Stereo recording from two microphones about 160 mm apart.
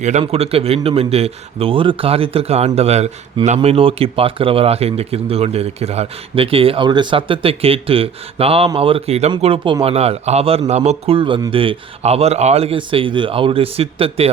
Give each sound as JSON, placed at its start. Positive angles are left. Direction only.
{"t": 0.0, "sound": "a man's voice", "side_deg": -45}